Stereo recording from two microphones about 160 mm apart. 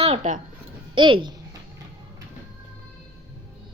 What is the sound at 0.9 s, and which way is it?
Speech, 30° right (ahead or behind).